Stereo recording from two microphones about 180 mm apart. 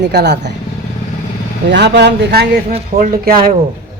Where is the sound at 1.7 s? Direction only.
70° right (ahead or behind).